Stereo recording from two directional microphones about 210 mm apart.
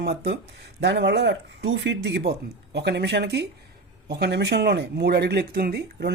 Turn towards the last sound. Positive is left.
turn(degrees=-50)  # may be behind; listen again after turning